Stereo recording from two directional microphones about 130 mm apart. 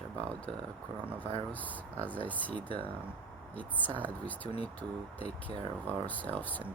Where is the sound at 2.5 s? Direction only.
40° right (ahead or behind).